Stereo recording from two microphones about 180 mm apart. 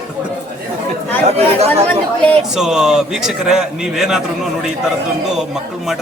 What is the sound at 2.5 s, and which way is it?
A man's voice, 5° right (ahead or behind).